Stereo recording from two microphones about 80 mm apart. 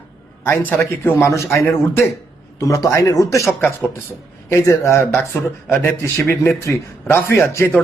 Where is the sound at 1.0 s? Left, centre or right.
Left.